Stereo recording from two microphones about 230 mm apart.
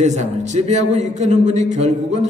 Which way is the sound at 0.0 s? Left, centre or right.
Right.